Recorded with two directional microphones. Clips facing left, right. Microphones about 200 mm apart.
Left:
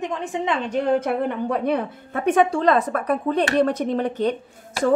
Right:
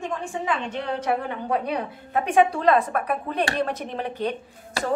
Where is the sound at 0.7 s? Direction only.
45° left (ahead or behind).